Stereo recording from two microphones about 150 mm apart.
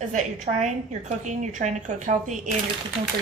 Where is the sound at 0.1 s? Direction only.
55° right (ahead or behind).